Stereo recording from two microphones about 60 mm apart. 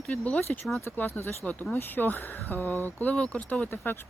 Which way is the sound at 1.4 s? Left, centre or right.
Left.